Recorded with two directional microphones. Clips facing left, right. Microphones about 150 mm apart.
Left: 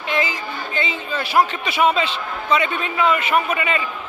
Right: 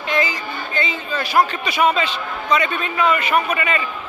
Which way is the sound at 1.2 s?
25° left (ahead or behind).